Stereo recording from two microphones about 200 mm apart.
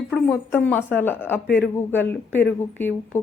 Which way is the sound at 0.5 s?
10° left (ahead or behind).